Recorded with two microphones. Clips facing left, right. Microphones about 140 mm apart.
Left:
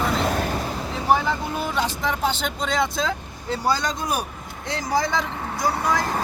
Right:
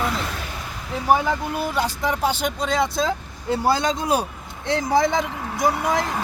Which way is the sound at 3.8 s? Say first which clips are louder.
Right 4 dB; 25° right (ahead or behind).